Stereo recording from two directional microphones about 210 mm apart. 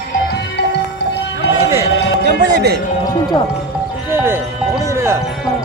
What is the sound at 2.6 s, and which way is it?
Speech, 50° right (ahead or behind).